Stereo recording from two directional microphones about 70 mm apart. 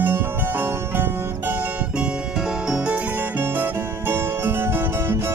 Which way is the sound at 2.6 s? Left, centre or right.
Centre.